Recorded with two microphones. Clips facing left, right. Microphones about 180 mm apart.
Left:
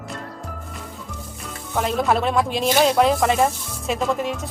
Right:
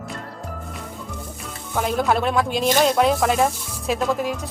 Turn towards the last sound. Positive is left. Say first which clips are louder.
# even
turn(degrees=0)  # may be behind; listen again after turning